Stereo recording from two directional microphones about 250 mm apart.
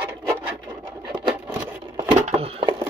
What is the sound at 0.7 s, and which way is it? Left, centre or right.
Sewing machine, centre.